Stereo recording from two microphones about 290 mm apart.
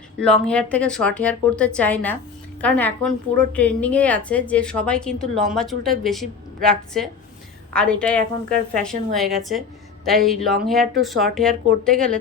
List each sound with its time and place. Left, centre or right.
0.2 s a woman's voice: centre